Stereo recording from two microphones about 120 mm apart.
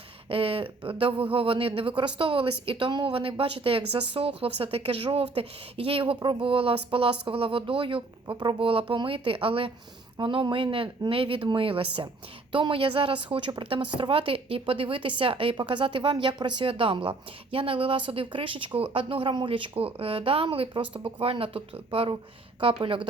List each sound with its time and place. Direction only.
0.3 s speech: 50° right (ahead or behind)